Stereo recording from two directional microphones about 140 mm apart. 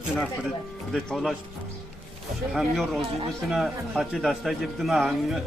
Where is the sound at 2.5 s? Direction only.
Centre (ahead or behind).